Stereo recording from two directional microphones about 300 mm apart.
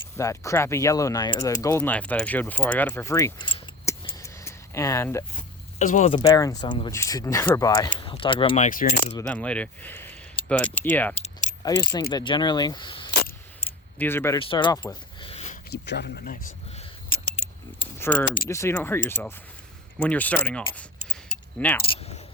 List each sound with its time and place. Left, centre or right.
0.2 s speech: centre
5.8 s speech: left
7.9 s mechanisms: centre
9.1 s speech: centre; by 15.5 s left
15.7 s a sound: left
17.9 s a sound: centre
18.4 s speech: centre
21.8 s keys jangling: centre